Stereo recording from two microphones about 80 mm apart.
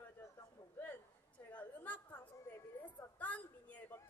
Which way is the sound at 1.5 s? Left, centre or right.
Centre.